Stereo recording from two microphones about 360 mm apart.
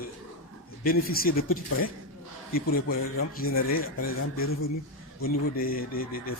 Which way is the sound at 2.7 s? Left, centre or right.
Left.